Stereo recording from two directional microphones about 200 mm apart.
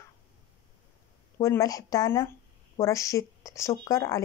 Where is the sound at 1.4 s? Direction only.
15° left (ahead or behind).